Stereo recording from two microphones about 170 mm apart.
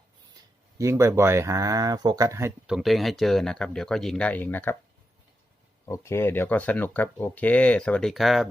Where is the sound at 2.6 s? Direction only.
Centre (ahead or behind).